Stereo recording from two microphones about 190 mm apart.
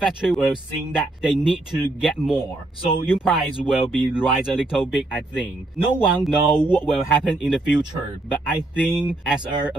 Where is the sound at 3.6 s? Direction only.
5° right (ahead or behind).